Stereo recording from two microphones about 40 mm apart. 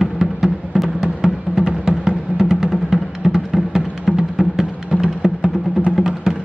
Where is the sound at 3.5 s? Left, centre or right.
Centre.